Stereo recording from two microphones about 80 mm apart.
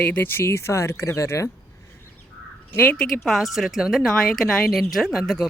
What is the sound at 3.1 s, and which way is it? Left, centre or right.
Speech, centre.